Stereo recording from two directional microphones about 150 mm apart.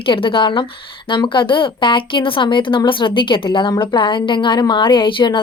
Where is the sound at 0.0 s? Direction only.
35° left (ahead or behind).